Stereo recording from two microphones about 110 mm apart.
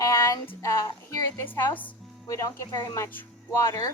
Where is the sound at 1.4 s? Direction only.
15° left (ahead or behind).